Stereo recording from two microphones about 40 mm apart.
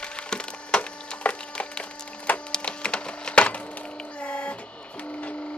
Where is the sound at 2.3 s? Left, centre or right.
Left.